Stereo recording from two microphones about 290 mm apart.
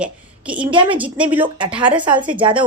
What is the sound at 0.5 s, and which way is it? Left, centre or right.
Speech, centre.